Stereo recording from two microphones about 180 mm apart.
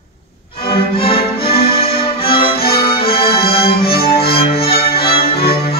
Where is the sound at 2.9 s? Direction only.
30° left (ahead or behind).